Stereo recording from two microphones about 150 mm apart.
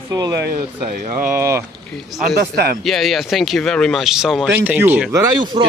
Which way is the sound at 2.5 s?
90° right.